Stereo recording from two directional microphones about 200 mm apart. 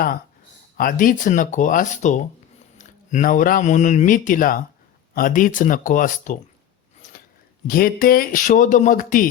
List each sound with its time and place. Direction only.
0.8 s speech: 45° left (ahead or behind)
7.7 s speech: 45° left (ahead or behind)